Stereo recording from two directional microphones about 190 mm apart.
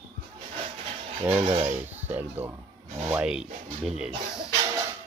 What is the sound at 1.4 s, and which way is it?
Speech, 30° right (ahead or behind).